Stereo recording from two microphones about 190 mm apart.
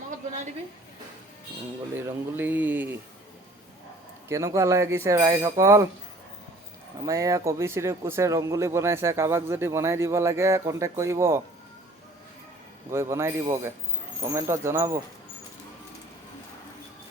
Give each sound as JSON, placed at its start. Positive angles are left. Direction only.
{"t": 2.0, "sound": "speech", "side_deg": -10}
{"t": 4.3, "sound": "speech", "side_deg": -15}
{"t": 7.0, "sound": "speech", "side_deg": -15}
{"t": 12.9, "sound": "speech", "side_deg": -15}